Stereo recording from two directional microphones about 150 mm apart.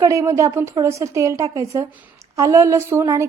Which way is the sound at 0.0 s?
20° right (ahead or behind).